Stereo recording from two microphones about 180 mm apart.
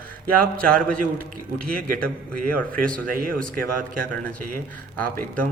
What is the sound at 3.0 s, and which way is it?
Speech, 50° right (ahead or behind).